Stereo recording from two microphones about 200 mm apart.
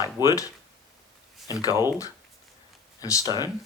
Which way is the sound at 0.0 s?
20° left (ahead or behind).